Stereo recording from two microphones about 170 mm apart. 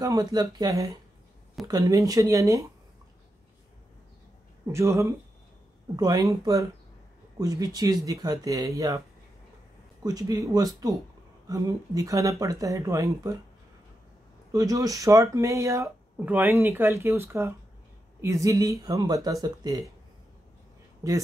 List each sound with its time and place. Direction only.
0.0 s speech: 20° right (ahead or behind)
4.7 s speech: 15° right (ahead or behind)
10.0 s speech: 20° right (ahead or behind)
14.5 s speech: 20° right (ahead or behind)
21.0 s speech: 20° right (ahead or behind)